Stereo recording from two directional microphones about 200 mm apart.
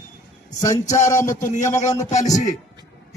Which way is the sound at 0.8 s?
35° left (ahead or behind).